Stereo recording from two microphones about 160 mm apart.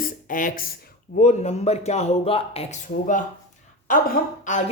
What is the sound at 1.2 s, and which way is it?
A man's voice, 45° left (ahead or behind).